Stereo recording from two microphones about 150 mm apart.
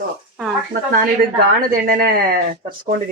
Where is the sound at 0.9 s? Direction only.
80° right.